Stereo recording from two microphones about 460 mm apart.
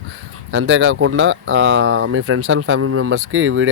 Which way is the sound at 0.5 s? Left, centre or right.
Right.